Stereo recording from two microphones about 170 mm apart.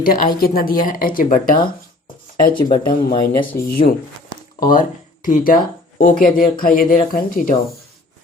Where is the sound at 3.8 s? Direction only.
35° left (ahead or behind).